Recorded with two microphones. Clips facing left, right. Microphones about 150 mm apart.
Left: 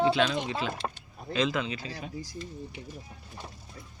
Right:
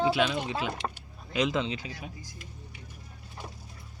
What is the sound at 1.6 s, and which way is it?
Speech, 20° right (ahead or behind).